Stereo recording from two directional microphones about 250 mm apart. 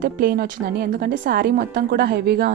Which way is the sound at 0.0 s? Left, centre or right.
Right.